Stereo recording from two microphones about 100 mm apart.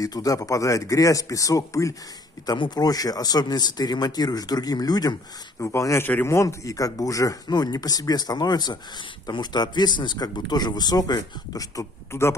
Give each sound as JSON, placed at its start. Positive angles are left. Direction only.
{"t": 0.0, "sound": "speech", "side_deg": 35}
{"t": 2.4, "sound": "speech", "side_deg": 45}
{"t": 5.6, "sound": "speech", "side_deg": 30}